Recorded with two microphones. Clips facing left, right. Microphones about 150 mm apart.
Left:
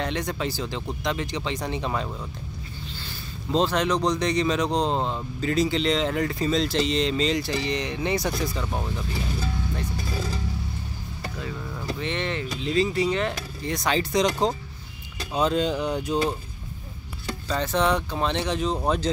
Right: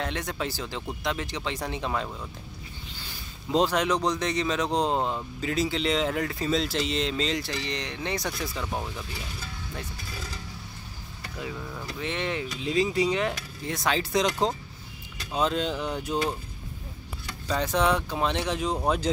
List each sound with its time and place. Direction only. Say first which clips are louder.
0.0 s speech: left 3 dB; 5° right (ahead or behind)
3.0 s speech: left 5 dB; 10° right (ahead or behind)
10.0 s mechanisms: left 9 dB; 35° left (ahead or behind)
11.5 s a sound: left 2 dB; centre (ahead or behind)
12.0 s speech: even; 5° right (ahead or behind)
13.7 s speech: left 2 dB; centre (ahead or behind)
17.5 s speech: left 1 dB; 10° right (ahead or behind)